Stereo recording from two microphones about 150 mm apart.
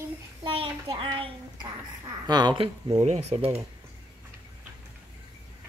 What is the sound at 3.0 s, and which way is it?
Speech, 45° right (ahead or behind).